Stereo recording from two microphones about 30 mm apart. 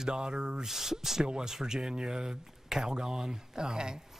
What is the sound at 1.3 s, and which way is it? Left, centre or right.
Speech, right.